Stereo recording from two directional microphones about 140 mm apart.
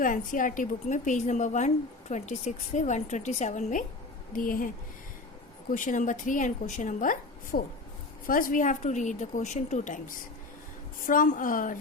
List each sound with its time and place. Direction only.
0.0 s a woman's voice: 70° left (ahead or behind)
4.3 s a woman's voice: 80° left
5.7 s a woman's voice: 65° left (ahead or behind)
11.0 s a woman's voice: 80° left